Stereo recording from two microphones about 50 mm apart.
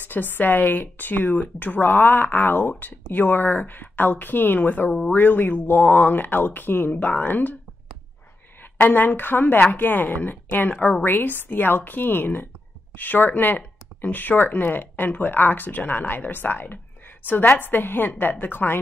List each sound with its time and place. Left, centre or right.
0.1 s speech: left
8.7 s speech: left